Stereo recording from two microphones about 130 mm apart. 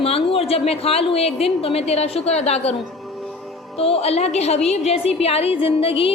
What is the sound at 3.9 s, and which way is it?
A woman's voice, 55° left (ahead or behind).